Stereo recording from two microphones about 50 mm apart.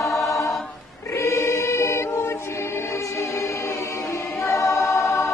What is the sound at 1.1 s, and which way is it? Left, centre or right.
Choir, left.